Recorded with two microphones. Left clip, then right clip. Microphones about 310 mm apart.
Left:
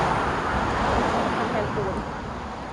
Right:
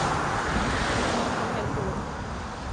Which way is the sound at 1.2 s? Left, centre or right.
Left.